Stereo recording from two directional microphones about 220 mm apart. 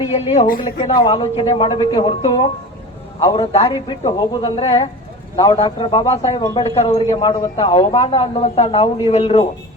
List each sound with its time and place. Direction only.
0.5 s a man's voice: 20° left (ahead or behind)